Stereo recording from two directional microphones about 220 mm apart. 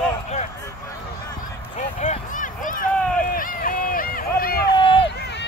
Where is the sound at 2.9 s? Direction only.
5° left (ahead or behind).